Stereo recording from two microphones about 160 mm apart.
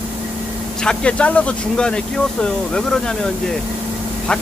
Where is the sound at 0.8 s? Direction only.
5° left (ahead or behind).